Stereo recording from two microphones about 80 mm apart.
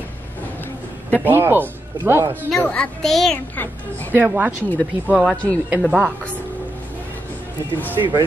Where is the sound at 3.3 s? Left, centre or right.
Left.